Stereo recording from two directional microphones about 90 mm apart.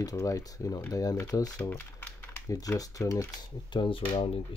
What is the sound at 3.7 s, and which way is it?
Speech, 65° left (ahead or behind).